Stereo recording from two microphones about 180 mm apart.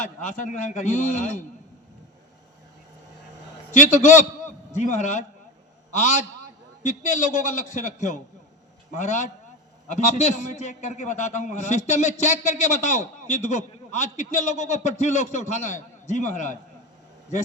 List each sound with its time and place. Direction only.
0.0 s a man's voice: 45° left (ahead or behind)
3.7 s a man's voice: 45° left (ahead or behind)